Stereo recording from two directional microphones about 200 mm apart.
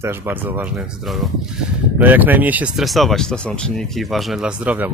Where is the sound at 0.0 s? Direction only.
10° right (ahead or behind).